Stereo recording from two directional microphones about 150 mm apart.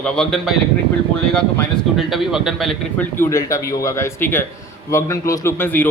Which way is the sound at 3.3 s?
20° left (ahead or behind).